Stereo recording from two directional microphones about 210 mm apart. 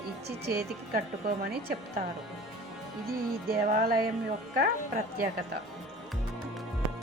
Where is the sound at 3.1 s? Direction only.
45° right (ahead or behind).